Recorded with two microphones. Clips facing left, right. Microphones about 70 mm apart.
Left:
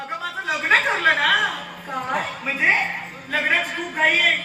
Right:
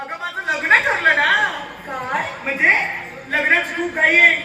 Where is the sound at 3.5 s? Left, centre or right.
Right.